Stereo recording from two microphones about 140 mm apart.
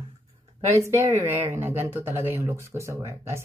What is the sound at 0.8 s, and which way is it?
Speech, 20° right (ahead or behind).